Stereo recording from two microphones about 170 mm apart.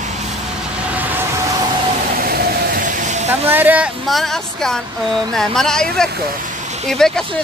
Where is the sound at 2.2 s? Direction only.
65° right (ahead or behind); by 3.3 s 45° right (ahead or behind).